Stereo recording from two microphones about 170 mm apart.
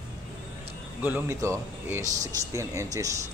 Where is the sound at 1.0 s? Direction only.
15° right (ahead or behind).